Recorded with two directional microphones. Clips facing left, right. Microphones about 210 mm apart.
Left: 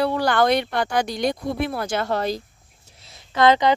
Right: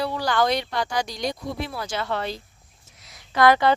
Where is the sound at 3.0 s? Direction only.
25° left (ahead or behind).